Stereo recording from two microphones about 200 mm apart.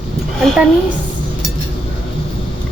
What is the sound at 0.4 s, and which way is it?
Speech, 5° right (ahead or behind).